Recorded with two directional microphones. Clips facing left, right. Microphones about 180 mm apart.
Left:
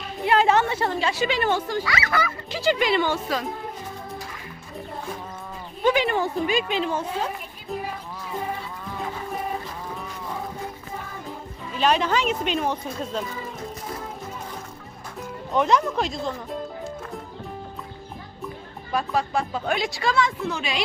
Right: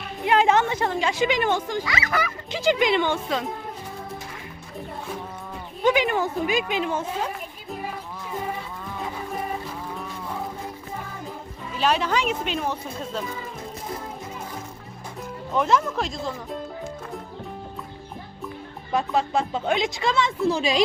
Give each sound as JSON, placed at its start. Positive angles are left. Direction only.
{"t": 0.3, "sound": "a sound", "side_deg": -15}
{"t": 0.7, "sound": "a woman's voice", "side_deg": -15}
{"t": 5.9, "sound": "speech", "side_deg": -15}
{"t": 11.8, "sound": "speech", "side_deg": -5}
{"t": 15.5, "sound": "speech", "side_deg": 0}
{"t": 18.9, "sound": "a woman's voice", "side_deg": -20}